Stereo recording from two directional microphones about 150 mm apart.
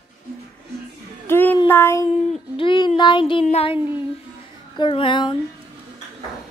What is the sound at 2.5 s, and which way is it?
Speech, 35° left (ahead or behind).